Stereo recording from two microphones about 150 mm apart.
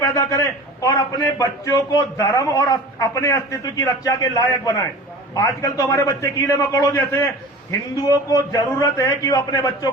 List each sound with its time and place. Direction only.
0.0 s a man's voice: 20° left (ahead or behind)
8.3 s a man's voice: 20° left (ahead or behind)